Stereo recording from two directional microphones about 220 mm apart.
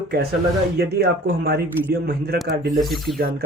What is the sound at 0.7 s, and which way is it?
Speech, 45° right (ahead or behind).